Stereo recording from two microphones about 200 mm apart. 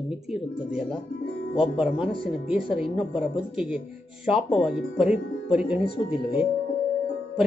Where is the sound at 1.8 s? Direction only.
5° right (ahead or behind).